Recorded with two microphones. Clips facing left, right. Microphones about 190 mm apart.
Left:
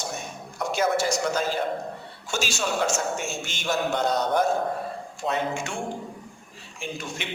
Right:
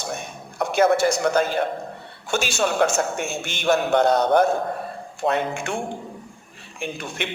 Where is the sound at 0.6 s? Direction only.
60° right (ahead or behind).